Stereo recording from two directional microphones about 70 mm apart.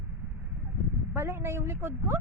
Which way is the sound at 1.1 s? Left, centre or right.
Right.